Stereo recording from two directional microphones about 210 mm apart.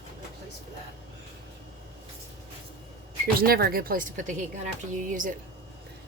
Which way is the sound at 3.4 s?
45° right (ahead or behind).